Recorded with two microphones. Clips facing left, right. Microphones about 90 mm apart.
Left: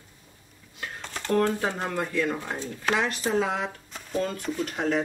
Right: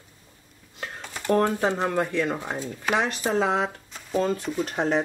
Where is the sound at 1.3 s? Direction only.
25° right (ahead or behind).